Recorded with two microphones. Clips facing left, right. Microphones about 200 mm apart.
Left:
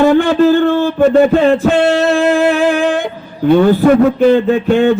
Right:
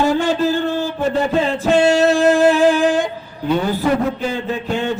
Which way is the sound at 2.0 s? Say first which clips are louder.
Left 1 dB; 55° left (ahead or behind).